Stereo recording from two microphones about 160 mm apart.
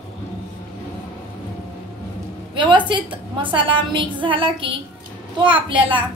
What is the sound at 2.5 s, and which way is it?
A woman's voice, 30° right (ahead or behind).